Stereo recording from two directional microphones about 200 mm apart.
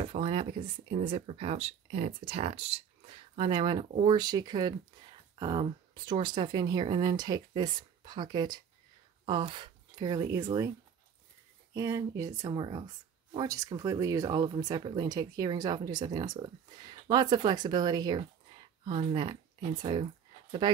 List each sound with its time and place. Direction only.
0.1 s speech: 25° right (ahead or behind)
11.7 s speech: 15° right (ahead or behind)